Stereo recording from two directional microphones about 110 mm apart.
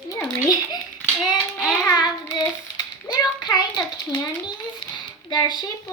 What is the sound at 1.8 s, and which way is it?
Child singing, 35° left (ahead or behind).